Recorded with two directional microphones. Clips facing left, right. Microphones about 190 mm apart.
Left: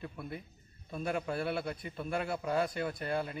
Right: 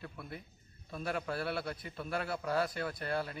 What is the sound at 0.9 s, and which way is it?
A man's voice, 5° left (ahead or behind).